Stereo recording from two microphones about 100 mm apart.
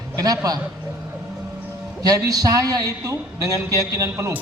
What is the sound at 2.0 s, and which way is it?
A man's voice, 35° right (ahead or behind).